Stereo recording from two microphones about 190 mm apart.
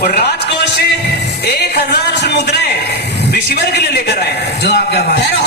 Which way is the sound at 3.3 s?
60° left (ahead or behind).